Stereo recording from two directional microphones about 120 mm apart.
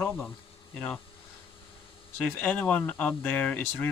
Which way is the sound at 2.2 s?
15° left (ahead or behind).